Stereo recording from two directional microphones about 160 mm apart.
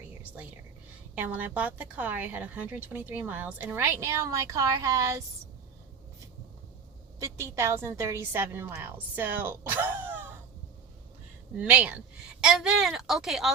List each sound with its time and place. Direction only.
1.1 s a woman's voice: 10° right (ahead or behind)
7.2 s a woman's voice: 15° right (ahead or behind)
11.5 s a woman's voice: 10° right (ahead or behind)